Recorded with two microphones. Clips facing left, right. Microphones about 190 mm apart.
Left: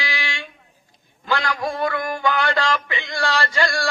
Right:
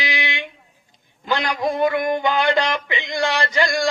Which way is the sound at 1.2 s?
20° right (ahead or behind).